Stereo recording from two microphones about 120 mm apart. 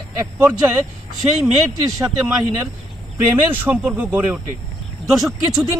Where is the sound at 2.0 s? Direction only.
10° right (ahead or behind).